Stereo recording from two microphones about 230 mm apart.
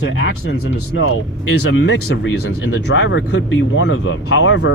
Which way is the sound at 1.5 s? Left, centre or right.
Left.